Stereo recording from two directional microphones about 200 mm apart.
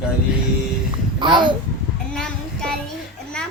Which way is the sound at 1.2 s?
25° right (ahead or behind).